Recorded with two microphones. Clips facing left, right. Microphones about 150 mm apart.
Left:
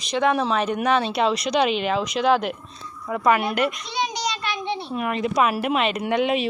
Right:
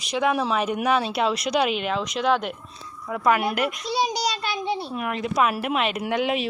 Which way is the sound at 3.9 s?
35° right (ahead or behind).